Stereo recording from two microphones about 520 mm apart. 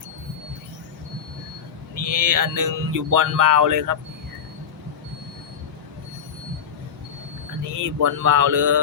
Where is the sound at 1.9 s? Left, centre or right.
Right.